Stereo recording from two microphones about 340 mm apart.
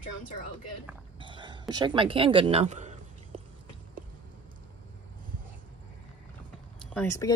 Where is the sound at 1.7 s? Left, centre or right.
Centre.